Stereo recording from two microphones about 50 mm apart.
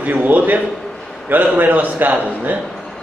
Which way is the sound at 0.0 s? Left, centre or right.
Right.